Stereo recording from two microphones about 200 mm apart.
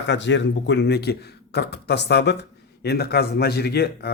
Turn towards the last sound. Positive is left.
turn(degrees=55)  # may be behind; listen again after turning